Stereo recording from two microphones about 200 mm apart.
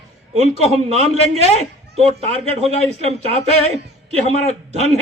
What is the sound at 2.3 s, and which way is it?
A man's voice, 30° right (ahead or behind).